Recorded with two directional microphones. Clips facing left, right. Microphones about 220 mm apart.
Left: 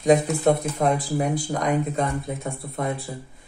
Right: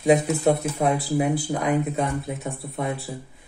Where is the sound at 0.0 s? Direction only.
5° right (ahead or behind).